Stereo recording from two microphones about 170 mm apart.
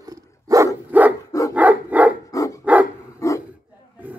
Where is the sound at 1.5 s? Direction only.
10° right (ahead or behind).